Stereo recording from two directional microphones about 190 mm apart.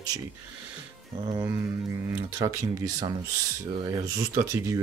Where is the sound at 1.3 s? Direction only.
15° right (ahead or behind).